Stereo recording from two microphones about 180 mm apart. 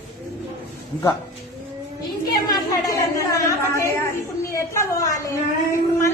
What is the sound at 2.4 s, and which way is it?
A woman's voice, 15° left (ahead or behind).